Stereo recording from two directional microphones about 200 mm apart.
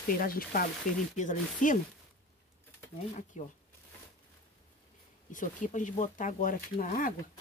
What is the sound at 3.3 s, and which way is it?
Speech, 40° left (ahead or behind).